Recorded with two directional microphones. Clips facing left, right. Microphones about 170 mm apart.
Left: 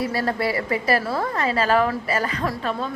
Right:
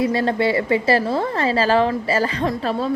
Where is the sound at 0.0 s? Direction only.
25° right (ahead or behind).